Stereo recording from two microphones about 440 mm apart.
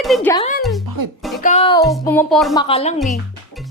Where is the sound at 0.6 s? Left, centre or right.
Centre.